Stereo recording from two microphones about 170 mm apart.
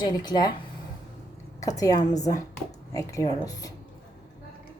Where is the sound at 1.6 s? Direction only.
20° left (ahead or behind).